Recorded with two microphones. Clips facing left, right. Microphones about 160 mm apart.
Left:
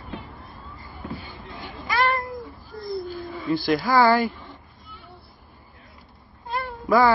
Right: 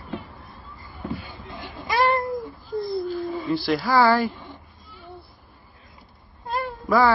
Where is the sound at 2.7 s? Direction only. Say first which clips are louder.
Right 10 dB; 20° right (ahead or behind).